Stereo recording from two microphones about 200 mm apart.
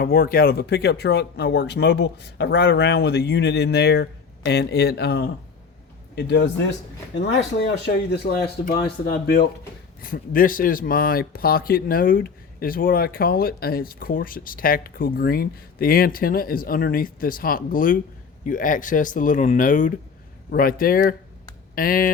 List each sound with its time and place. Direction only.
0.0 s speech: 45° left (ahead or behind)